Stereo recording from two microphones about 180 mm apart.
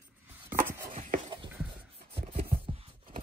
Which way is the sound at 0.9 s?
45° right (ahead or behind).